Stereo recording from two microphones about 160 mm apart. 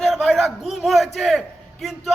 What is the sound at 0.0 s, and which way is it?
A man's voice, centre (ahead or behind).